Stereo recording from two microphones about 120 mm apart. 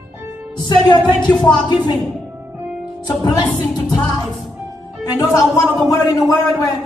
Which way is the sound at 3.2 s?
30° left (ahead or behind).